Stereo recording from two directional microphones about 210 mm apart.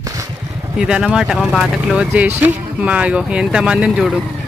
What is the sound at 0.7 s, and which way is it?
Speech, 5° right (ahead or behind).